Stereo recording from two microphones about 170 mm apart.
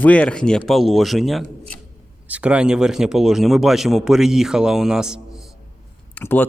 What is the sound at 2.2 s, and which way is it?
Speech, 10° right (ahead or behind).